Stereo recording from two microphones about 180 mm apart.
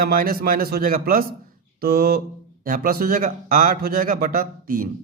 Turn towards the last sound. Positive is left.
turn(degrees=-55)  # may be behind; listen again after turning